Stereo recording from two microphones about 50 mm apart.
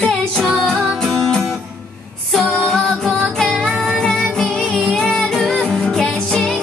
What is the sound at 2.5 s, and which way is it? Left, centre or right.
Music, centre.